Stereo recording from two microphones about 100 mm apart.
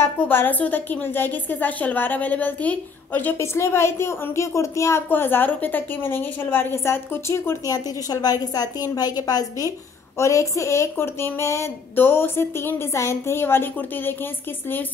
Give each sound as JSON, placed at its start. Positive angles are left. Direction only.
{"t": 0.0, "sound": "a woman's voice", "side_deg": 20}
{"t": 7.7, "sound": "a woman's voice", "side_deg": 40}